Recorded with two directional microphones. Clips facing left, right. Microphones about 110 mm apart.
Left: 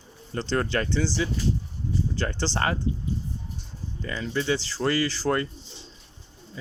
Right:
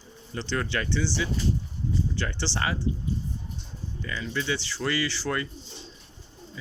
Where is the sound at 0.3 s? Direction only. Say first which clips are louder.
Left 4 dB; 40° left (ahead or behind).